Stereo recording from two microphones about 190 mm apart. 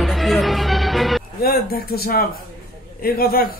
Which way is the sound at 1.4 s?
50° left (ahead or behind).